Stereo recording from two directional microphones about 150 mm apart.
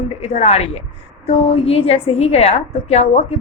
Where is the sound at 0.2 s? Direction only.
45° left (ahead or behind).